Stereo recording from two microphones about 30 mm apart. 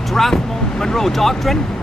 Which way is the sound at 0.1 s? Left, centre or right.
Centre.